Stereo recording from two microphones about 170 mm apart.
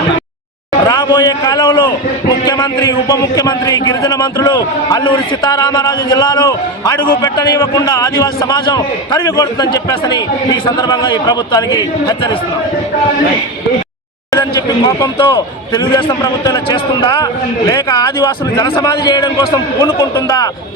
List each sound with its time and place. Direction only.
0.9 s a man's voice: 20° left (ahead or behind)
14.3 s a man's voice: 20° left (ahead or behind)